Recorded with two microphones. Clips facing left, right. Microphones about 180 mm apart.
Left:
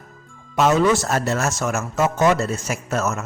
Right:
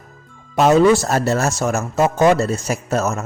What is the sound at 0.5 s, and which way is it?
Speech, 35° right (ahead or behind).